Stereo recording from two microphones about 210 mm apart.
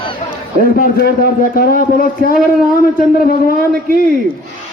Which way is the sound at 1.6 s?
45° left (ahead or behind).